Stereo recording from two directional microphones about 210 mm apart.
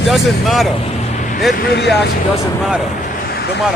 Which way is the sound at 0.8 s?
35° left (ahead or behind).